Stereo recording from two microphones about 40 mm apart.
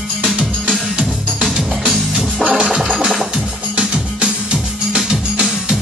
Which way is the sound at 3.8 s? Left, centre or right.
Right.